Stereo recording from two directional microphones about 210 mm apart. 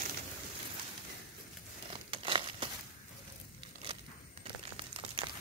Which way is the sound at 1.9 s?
25° right (ahead or behind).